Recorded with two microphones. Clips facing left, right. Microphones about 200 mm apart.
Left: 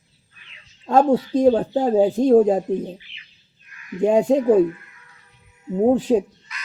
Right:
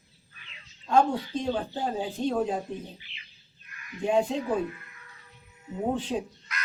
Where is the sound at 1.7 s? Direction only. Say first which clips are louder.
Left 14 dB; 45° left (ahead or behind).